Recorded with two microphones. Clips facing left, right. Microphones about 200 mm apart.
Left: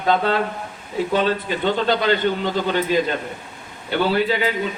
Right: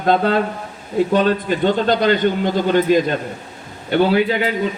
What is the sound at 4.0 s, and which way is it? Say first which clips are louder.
Speech: right 3 dB; 45° right (ahead or behind).